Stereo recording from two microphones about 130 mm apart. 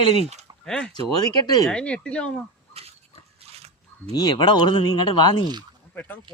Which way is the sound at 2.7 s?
50° right (ahead or behind).